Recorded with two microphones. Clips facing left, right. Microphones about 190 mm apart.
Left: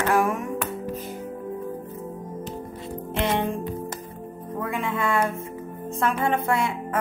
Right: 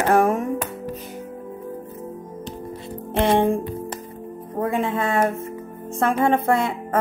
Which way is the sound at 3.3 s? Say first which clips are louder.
Right 7 dB; 50° right (ahead or behind).